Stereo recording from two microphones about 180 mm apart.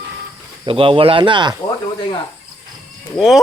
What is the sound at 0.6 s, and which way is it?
Speech, 30° right (ahead or behind).